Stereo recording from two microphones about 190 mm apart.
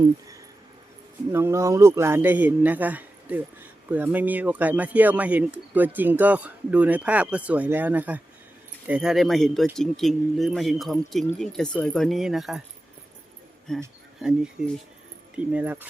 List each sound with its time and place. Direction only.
1.3 s a man's voice: 15° right (ahead or behind)
13.7 s speech: centre (ahead or behind)
15.5 s speech: 10° right (ahead or behind)